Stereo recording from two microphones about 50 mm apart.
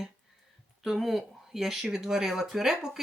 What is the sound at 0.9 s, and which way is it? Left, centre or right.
Speech, centre.